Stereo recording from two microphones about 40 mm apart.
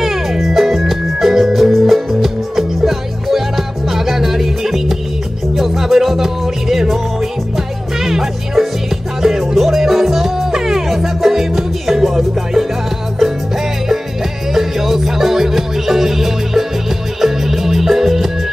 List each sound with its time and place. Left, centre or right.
0.0 s music: centre
14.5 s music: centre